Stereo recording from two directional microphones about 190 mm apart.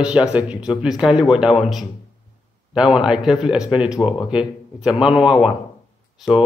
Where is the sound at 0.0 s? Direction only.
5° right (ahead or behind).